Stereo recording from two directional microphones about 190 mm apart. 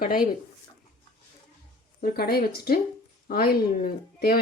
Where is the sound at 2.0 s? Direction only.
55° left (ahead or behind).